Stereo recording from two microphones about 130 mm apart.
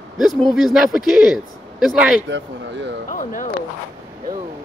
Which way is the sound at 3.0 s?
90° left.